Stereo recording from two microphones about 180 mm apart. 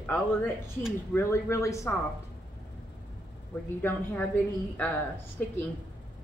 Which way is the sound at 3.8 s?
10° left (ahead or behind).